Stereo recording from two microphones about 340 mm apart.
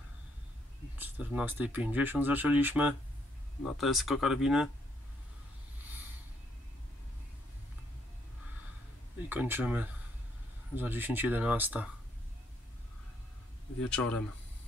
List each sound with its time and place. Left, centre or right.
0.9 s speech: centre
9.3 s speech: centre
13.7 s speech: centre